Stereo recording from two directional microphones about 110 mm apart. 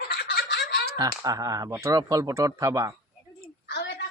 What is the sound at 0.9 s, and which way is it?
Speech, 35° right (ahead or behind).